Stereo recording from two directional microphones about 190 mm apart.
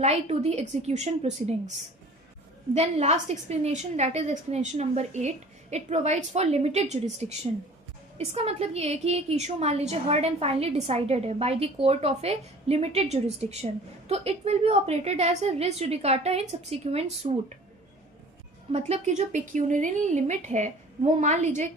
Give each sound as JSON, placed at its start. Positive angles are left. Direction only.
{"t": 0.0, "sound": "a woman's voice", "side_deg": -35}
{"t": 2.7, "sound": "a woman's voice", "side_deg": -35}
{"t": 18.7, "sound": "a woman's voice", "side_deg": -35}